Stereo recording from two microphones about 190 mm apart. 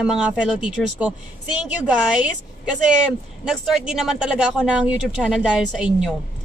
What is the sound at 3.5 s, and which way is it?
Speech, centre (ahead or behind).